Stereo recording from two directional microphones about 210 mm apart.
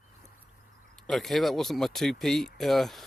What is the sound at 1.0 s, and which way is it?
Speech, centre (ahead or behind).